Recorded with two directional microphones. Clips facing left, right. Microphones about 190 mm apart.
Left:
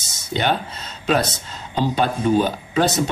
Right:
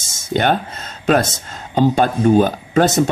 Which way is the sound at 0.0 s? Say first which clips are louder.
Right 5 dB; 50° right (ahead or behind).